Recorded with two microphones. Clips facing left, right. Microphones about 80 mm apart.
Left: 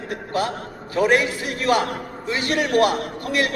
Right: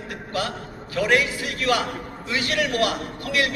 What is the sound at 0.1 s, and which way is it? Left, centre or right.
A man's voice, left.